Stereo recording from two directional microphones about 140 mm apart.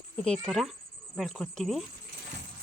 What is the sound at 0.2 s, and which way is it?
Speech, 5° left (ahead or behind).